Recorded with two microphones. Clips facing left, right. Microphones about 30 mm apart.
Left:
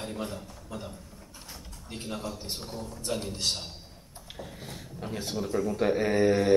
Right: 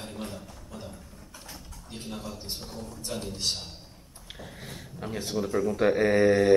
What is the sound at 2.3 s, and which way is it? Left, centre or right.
A man's voice, centre.